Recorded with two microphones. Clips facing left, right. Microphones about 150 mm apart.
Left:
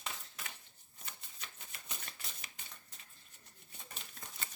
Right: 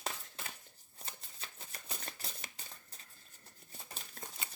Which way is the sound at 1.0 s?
35° right (ahead or behind).